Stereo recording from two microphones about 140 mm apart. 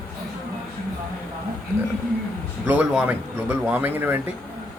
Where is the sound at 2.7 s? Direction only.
10° right (ahead or behind).